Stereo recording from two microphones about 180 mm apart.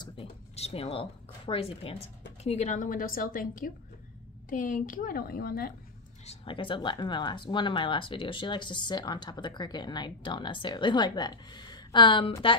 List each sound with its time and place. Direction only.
0.0 s a sound: 30° left (ahead or behind)
2.4 s a woman's voice: 40° left (ahead or behind); by 5.8 s 55° left (ahead or behind)
6.2 s speech: 30° left (ahead or behind)